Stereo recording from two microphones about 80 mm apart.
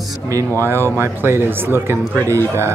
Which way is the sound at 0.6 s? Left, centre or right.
Right.